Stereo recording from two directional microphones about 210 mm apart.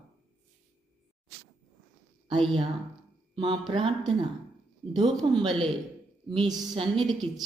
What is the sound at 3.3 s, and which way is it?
Speech, 25° right (ahead or behind).